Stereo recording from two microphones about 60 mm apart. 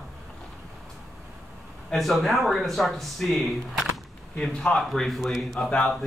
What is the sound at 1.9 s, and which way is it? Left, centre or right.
A man's voice, centre.